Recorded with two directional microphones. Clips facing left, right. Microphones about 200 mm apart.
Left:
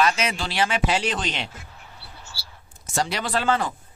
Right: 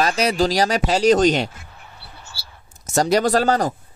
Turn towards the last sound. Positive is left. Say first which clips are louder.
# right 6 dB
turn(degrees=-40)  # may be behind; listen again after turning